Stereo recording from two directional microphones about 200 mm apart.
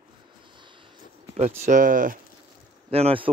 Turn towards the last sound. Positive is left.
turn(degrees=-30)  # may be behind; listen again after turning